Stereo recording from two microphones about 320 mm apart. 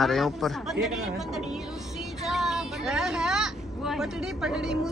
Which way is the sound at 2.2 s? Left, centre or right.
Centre.